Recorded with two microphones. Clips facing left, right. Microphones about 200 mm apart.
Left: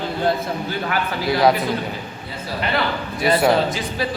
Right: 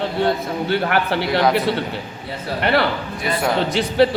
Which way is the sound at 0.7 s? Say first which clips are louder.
Right 9 dB; 70° right (ahead or behind).